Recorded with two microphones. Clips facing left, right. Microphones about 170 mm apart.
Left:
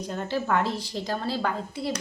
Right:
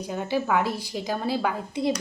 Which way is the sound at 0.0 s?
10° right (ahead or behind).